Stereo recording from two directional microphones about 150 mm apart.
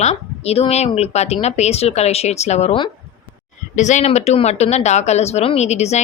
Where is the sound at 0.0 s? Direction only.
45° left (ahead or behind).